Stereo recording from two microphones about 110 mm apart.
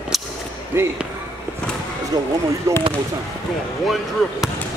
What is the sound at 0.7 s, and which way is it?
Speech, 20° right (ahead or behind).